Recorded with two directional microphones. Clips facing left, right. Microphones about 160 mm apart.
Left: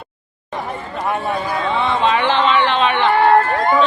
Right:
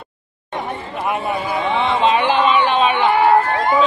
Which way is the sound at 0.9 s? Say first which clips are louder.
Left 1 dB; 5° right (ahead or behind).